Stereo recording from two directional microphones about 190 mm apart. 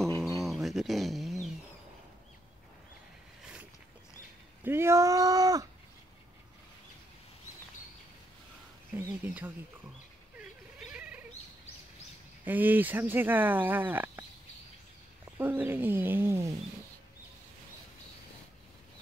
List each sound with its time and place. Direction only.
0.4 s a sound: centre (ahead or behind)
4.6 s speech: 15° right (ahead or behind)
8.9 s speech: 10° right (ahead or behind)
10.8 s a sound: 5° right (ahead or behind)
12.4 s speech: 10° right (ahead or behind)
15.3 s speech: 10° right (ahead or behind)